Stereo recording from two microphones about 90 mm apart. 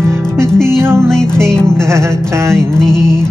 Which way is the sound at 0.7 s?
30° right (ahead or behind).